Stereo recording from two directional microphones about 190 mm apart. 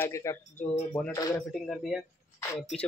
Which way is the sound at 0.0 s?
15° left (ahead or behind).